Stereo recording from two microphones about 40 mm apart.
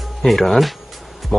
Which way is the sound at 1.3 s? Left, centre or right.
Centre.